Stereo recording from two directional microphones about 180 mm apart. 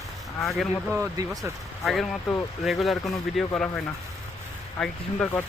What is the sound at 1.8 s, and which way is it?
Speech, centre (ahead or behind).